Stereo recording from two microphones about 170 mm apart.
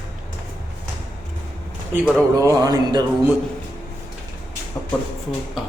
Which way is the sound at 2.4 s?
20° right (ahead or behind).